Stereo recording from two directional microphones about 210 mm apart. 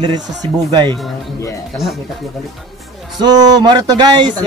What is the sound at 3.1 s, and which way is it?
A man's voice, 20° right (ahead or behind).